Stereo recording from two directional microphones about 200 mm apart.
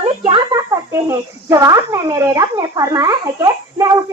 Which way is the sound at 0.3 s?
20° right (ahead or behind).